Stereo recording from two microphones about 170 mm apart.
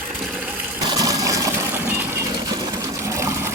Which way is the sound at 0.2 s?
5° right (ahead or behind).